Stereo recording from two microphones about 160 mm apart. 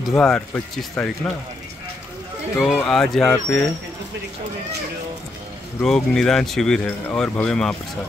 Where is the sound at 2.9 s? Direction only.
5° left (ahead or behind).